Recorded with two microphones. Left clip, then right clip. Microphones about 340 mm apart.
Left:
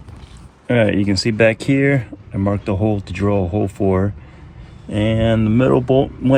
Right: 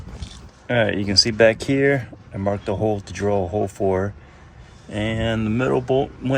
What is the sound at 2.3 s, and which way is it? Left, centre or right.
Speech, left.